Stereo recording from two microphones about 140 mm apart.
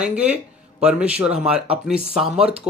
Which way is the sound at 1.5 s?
45° right (ahead or behind).